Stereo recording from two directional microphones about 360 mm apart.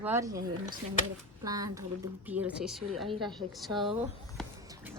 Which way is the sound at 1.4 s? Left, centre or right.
Centre.